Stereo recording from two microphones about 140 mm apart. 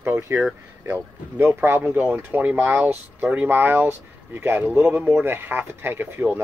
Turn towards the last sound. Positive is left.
turn(degrees=-15)  # may be behind; listen again after turning